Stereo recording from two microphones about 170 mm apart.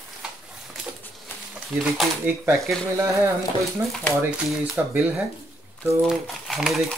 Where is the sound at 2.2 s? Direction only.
15° right (ahead or behind).